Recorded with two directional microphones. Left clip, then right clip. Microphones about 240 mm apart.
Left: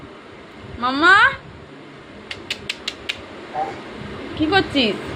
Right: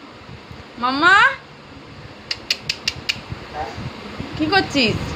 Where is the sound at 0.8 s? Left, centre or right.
Centre.